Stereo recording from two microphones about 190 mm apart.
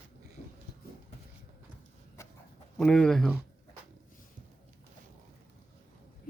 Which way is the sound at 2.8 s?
5° left (ahead or behind).